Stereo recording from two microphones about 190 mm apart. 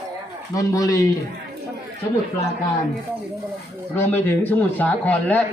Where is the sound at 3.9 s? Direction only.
10° left (ahead or behind).